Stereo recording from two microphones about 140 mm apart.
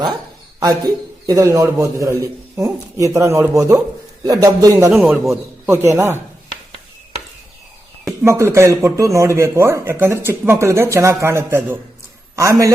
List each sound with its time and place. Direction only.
0.6 s speech: 25° right (ahead or behind)
4.9 s a man's voice: centre (ahead or behind)
5.3 s speech: 20° right (ahead or behind)
8.2 s speech: 20° right (ahead or behind)